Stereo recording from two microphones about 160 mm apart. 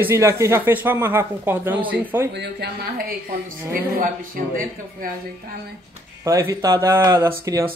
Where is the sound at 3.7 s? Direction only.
60° right (ahead or behind).